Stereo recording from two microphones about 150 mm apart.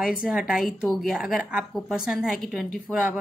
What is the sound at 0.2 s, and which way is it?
A woman's voice, 5° right (ahead or behind).